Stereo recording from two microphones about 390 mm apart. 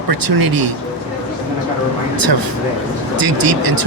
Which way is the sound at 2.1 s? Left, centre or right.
Right.